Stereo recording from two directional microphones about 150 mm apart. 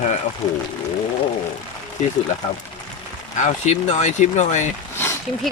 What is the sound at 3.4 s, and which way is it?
Speech, 50° left (ahead or behind).